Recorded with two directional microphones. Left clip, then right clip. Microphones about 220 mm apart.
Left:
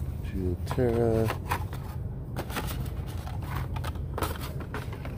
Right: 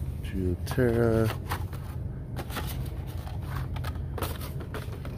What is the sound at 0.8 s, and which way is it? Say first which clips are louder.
Speech: right 1 dB; 10° right (ahead or behind).